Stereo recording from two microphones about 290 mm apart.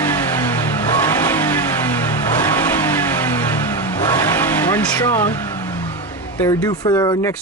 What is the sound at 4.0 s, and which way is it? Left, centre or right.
Vehicle, centre.